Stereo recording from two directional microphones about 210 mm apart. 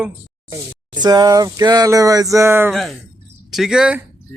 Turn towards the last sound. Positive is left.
turn(degrees=-5)  # may be behind; listen again after turning